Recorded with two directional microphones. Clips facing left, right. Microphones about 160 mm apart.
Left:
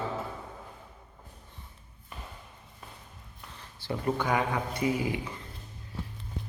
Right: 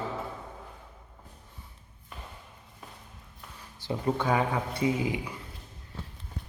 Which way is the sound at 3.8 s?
15° right (ahead or behind).